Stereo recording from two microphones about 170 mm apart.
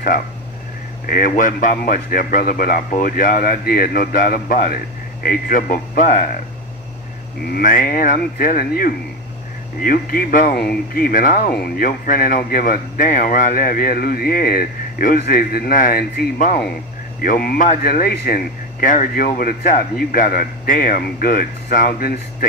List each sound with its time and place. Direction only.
1.0 s speech: 55° left (ahead or behind)
7.5 s speech: 55° left (ahead or behind)